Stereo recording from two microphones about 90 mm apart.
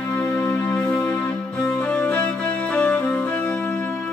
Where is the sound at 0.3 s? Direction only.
15° left (ahead or behind).